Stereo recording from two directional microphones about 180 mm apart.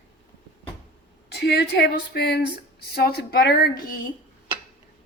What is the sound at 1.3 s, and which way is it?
A woman's voice, 65° left (ahead or behind).